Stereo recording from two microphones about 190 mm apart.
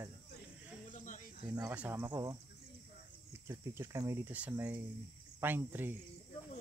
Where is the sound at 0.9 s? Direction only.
45° left (ahead or behind).